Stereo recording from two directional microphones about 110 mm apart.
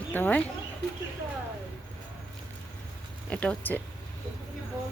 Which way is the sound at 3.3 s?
10° left (ahead or behind).